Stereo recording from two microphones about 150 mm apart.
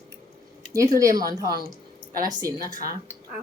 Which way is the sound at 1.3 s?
25° right (ahead or behind).